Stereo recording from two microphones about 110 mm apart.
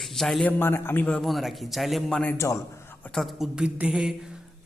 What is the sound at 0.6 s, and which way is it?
Speech, 20° left (ahead or behind).